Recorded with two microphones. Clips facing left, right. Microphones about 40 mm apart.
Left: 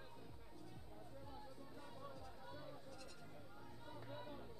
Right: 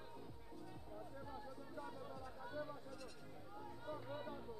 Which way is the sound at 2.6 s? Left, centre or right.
Centre.